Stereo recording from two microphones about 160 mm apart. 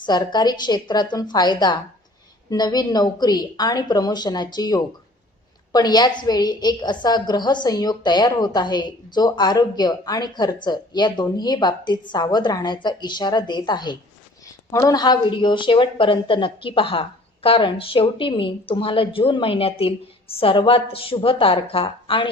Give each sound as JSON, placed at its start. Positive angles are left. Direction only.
{"t": 0.0, "sound": "a woman's voice", "side_deg": 25}